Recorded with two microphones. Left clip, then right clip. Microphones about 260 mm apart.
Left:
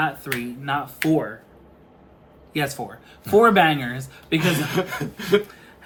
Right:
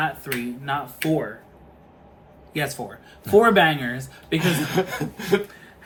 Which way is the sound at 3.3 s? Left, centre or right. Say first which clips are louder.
Left 1 dB; centre.